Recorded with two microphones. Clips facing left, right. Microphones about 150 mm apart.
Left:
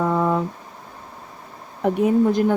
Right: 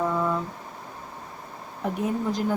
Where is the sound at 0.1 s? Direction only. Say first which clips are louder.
Left 6 dB; 65° left (ahead or behind).